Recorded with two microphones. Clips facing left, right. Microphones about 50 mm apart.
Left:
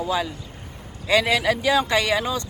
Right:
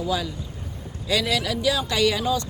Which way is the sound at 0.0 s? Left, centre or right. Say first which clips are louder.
Left 2 dB; left.